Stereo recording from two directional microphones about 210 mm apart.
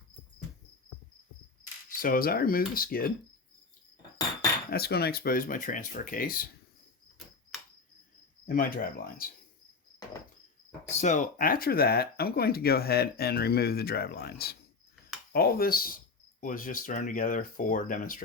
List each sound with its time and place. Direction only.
2.0 s speech: 45° left (ahead or behind)
4.7 s speech: 50° left (ahead or behind)
7.5 s cricket: centre (ahead or behind)
8.4 s speech: 45° left (ahead or behind)
11.0 s speech: 35° left (ahead or behind)